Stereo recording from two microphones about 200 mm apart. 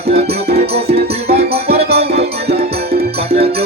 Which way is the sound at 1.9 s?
55° right (ahead or behind).